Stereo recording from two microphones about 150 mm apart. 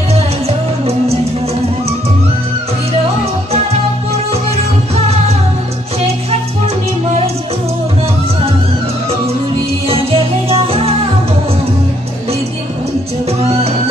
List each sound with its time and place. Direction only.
0.1 s music: 45° right (ahead or behind)
9.8 s music: 40° right (ahead or behind)
13.4 s music: 45° right (ahead or behind)